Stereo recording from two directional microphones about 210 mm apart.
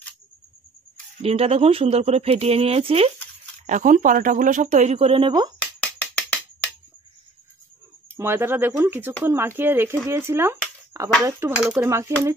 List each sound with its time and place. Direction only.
1.2 s speech: 30° right (ahead or behind)
5.6 s music: 5° left (ahead or behind)
8.2 s speech: 10° right (ahead or behind)